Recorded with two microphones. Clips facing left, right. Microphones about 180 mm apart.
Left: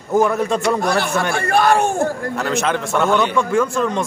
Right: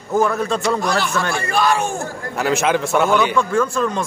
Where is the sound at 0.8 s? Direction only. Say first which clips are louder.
Left 2 dB; 60° left (ahead or behind).